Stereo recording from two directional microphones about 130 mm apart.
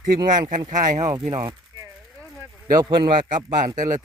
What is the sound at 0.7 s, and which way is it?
Speech, 75° right (ahead or behind).